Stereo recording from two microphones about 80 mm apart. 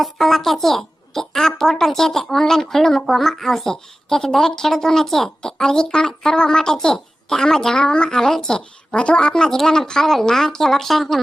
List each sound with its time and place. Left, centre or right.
0.0 s a woman's voice: centre